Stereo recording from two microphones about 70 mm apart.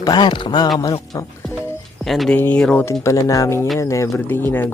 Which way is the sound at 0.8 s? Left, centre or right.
Left.